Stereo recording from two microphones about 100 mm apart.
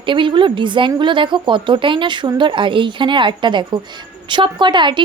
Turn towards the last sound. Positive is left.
turn(degrees=-50)  # may be behind; listen again after turning